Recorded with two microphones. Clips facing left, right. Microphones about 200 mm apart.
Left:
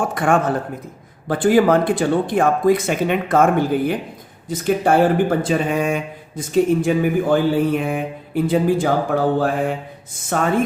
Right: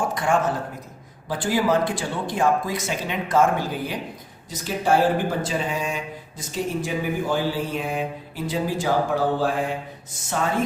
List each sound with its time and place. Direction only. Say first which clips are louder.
0.0 s speech: left 4 dB; 55° left (ahead or behind)